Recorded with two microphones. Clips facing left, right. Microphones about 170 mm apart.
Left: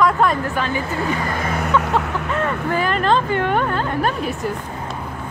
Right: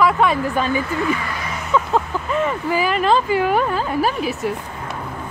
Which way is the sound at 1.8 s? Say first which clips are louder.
Right 4 dB; 70° left (ahead or behind).